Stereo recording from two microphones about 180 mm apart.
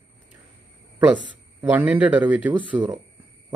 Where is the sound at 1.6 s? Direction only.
10° right (ahead or behind).